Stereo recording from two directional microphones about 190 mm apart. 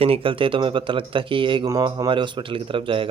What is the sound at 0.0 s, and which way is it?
Speech, 30° right (ahead or behind).